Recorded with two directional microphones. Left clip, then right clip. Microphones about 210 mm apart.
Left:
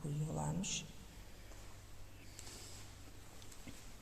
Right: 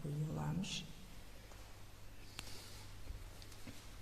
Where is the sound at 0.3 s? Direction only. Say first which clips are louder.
Left 3 dB; 15° left (ahead or behind).